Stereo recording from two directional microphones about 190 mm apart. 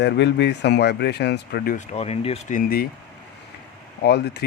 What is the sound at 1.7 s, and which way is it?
Speech, 35° left (ahead or behind).